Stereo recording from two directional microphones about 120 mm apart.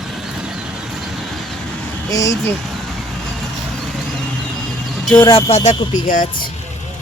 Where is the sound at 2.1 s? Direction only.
25° left (ahead or behind).